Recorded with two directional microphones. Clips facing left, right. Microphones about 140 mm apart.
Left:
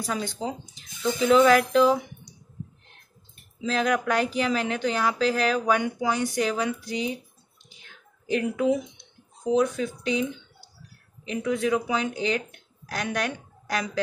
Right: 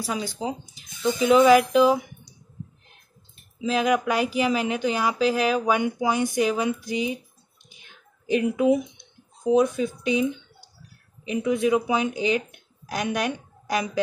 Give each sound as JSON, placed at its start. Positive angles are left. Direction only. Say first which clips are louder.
{"t": 0.0, "sound": "speech", "louder": "right 1 dB", "side_deg": -10}
{"t": 3.6, "sound": "speech", "louder": "right 2 dB", "side_deg": -10}
{"t": 7.7, "sound": "a sound", "louder": "even", "side_deg": -15}
{"t": 9.5, "sound": "speech", "louder": "right 3 dB", "side_deg": -15}